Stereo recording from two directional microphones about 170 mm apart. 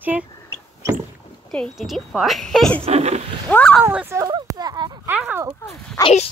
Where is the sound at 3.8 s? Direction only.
15° right (ahead or behind).